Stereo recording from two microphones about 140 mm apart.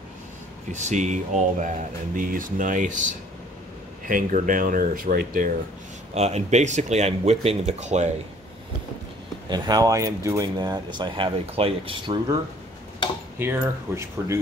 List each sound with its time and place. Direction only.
0.7 s speech: 60° right (ahead or behind); by 5.5 s 85° right
6.1 s speech: 50° right (ahead or behind)
9.5 s speech: 25° right (ahead or behind)
13.4 s speech: 15° right (ahead or behind)